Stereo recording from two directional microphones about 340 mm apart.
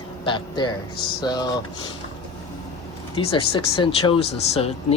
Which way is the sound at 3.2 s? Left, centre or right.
Centre.